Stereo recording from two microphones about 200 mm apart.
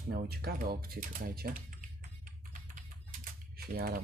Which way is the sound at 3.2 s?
50° right (ahead or behind).